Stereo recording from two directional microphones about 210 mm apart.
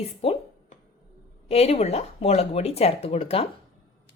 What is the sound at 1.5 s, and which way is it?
A woman's voice, 30° left (ahead or behind).